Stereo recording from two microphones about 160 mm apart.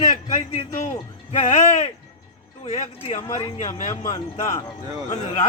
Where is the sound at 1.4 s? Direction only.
40° left (ahead or behind).